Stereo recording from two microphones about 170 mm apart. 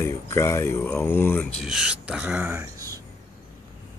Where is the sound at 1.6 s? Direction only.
5° right (ahead or behind); by 3.0 s 20° right (ahead or behind).